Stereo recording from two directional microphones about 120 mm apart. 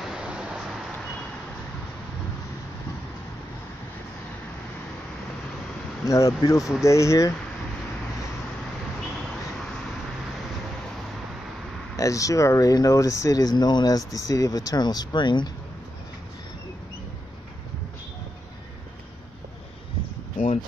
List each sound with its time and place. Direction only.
0.0 s vehicle: 5° right (ahead or behind)
6.0 s speech: 30° left (ahead or behind)
12.0 s speech: 25° left (ahead or behind)